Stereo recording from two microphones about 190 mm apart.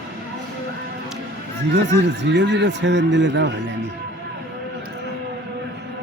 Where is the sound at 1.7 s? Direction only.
70° right (ahead or behind).